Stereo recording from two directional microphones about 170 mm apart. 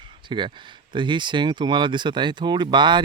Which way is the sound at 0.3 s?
30° right (ahead or behind).